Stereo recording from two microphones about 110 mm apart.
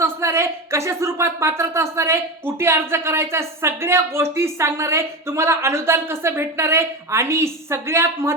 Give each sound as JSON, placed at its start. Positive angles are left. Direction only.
{"t": 0.0, "sound": "speech", "side_deg": -25}